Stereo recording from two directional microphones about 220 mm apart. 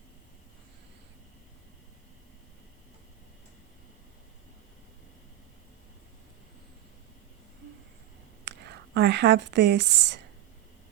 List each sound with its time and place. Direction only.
8.4 s speech: 50° right (ahead or behind)